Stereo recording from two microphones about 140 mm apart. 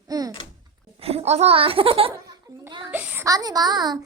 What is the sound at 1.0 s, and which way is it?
Speech, 45° right (ahead or behind).